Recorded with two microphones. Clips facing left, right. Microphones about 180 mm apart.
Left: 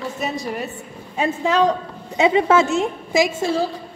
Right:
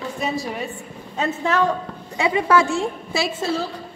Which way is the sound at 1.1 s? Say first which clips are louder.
Left 2 dB; 10° left (ahead or behind).